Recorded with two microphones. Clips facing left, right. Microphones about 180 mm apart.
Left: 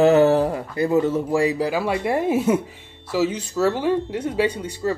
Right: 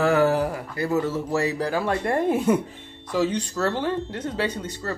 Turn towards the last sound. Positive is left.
turn(degrees=10)  # may be behind; listen again after turning